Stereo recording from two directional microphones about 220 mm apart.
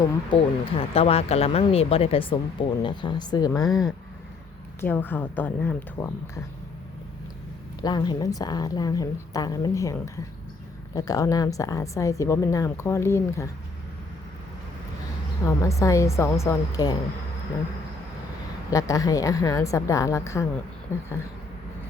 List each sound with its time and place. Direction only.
0.0 s speech: 25° left (ahead or behind)
3.7 s speech: centre (ahead or behind)
4.8 s a woman's voice: 10° left (ahead or behind)
7.8 s a woman's voice: 20° left (ahead or behind)
15.4 s a woman's voice: 15° left (ahead or behind)
18.7 s a woman's voice: 15° left (ahead or behind)